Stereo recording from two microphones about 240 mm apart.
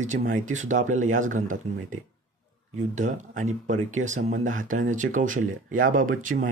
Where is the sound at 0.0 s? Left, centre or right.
Right.